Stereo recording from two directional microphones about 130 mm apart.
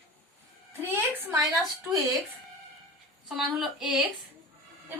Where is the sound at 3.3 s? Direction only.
5° right (ahead or behind).